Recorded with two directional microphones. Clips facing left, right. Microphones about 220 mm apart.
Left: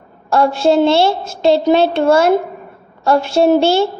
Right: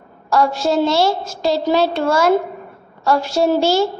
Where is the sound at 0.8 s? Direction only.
25° left (ahead or behind).